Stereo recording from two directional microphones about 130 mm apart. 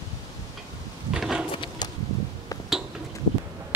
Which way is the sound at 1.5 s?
40° left (ahead or behind).